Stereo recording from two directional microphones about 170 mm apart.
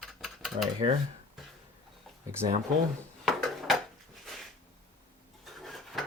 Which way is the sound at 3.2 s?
Centre (ahead or behind).